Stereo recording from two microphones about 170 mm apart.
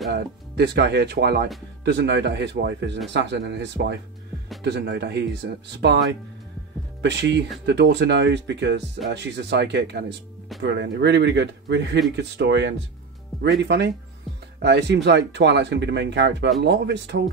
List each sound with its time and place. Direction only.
0.1 s speech: 80° right
1.9 s speech: 90° right
7.0 s speech: 90° right
13.3 s speech: centre (ahead or behind)
13.7 s speech: 85° right